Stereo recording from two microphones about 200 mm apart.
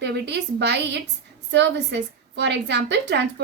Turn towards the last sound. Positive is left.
turn(degrees=-60)  # may be behind; listen again after turning